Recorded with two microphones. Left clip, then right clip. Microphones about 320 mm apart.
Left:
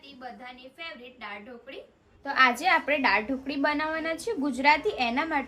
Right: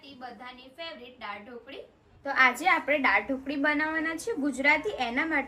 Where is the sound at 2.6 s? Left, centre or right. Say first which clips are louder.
Left 1 dB; centre.